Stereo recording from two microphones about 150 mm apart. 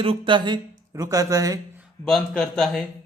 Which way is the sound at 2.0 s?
Centre (ahead or behind).